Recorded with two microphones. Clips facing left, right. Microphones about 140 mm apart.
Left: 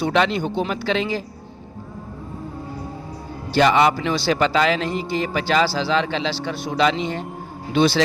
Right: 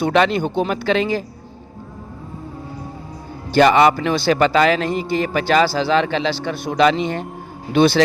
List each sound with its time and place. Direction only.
0.0 s a man's voice: 50° right (ahead or behind)
3.5 s a man's voice: 55° right (ahead or behind)